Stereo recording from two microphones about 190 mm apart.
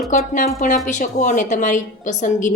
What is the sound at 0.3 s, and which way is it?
A woman's voice, 40° left (ahead or behind).